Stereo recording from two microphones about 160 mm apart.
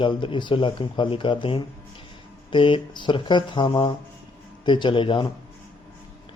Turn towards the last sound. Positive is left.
turn(degrees=30)  # may be behind; listen again after turning